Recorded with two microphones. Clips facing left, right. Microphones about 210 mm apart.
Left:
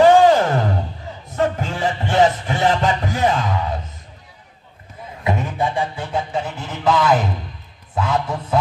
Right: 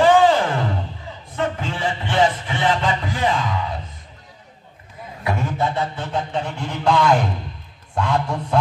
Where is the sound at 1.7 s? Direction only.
40° left (ahead or behind).